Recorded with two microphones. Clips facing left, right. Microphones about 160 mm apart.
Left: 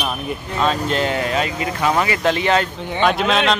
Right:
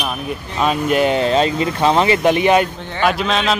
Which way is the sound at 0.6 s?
15° right (ahead or behind).